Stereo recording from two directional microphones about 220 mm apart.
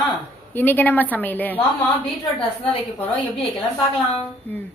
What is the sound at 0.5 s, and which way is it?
A woman's voice, 10° left (ahead or behind).